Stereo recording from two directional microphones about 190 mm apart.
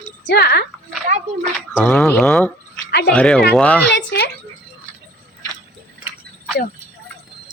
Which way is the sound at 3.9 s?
65° left (ahead or behind).